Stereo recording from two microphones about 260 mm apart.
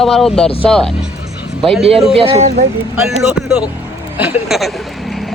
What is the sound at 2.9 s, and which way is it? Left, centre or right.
Speech, centre.